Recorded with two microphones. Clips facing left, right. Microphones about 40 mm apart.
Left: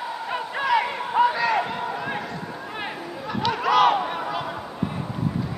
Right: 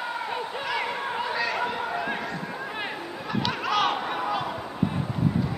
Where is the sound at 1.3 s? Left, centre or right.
Centre.